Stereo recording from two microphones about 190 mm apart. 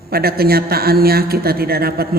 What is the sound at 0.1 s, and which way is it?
Speech, 55° right (ahead or behind).